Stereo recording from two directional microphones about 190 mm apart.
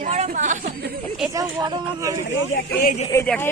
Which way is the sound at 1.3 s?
20° right (ahead or behind).